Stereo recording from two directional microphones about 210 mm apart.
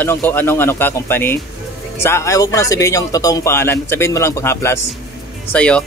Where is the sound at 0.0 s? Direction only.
10° left (ahead or behind).